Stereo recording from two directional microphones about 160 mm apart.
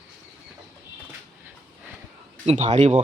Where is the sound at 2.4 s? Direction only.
45° right (ahead or behind).